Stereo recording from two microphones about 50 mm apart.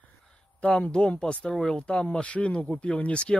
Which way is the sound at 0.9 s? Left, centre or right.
Centre.